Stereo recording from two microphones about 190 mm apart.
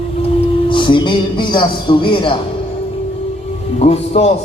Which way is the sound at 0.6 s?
25° left (ahead or behind).